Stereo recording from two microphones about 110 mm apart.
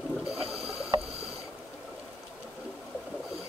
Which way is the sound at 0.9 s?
45° right (ahead or behind).